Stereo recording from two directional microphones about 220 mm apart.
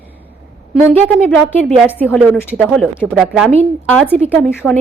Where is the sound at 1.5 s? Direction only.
5° left (ahead or behind).